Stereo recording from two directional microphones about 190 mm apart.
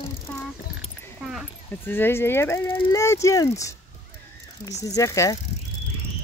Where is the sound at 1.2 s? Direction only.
Centre (ahead or behind).